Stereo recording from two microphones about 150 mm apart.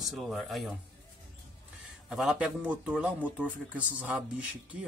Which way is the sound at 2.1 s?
5° right (ahead or behind).